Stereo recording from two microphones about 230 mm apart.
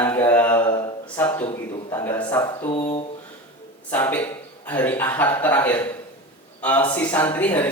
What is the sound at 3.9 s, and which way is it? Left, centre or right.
Mantra, centre.